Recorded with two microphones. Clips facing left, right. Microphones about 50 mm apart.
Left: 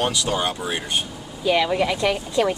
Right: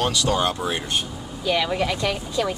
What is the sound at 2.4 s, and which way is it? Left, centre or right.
Speech, left.